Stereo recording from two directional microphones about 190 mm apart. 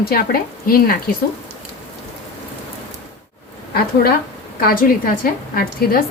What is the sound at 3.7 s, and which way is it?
A woman's voice, 55° left (ahead or behind).